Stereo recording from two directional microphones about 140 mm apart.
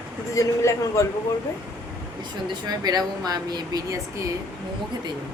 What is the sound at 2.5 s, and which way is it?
Speech, 30° right (ahead or behind).